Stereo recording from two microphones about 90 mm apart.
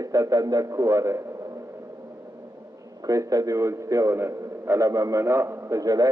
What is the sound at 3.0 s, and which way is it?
A man's voice, 40° right (ahead or behind).